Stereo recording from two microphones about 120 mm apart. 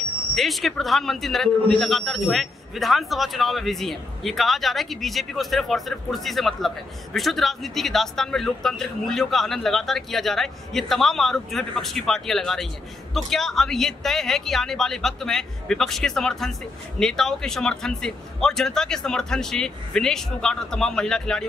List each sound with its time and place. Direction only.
0.4 s a man's voice: centre (ahead or behind)